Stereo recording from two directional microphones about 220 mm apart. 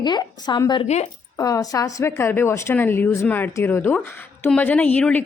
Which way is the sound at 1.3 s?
15° left (ahead or behind).